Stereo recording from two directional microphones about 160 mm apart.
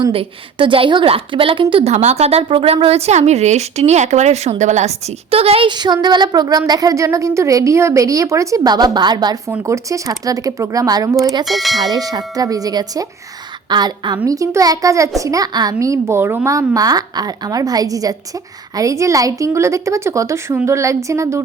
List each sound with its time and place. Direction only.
0.0 s a woman's voice: 35° right (ahead or behind)
11.4 s speech: centre (ahead or behind)
11.9 s a woman's voice: 25° right (ahead or behind)